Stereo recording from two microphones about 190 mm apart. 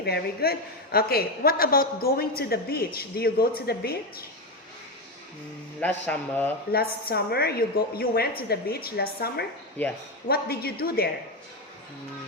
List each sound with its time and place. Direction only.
0.0 s a woman's voice: 55° left (ahead or behind)
5.8 s a man's voice: 10° left (ahead or behind)
6.7 s a woman's voice: 55° left (ahead or behind)